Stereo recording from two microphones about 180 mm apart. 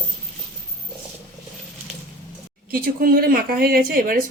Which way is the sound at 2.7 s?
55° right (ahead or behind).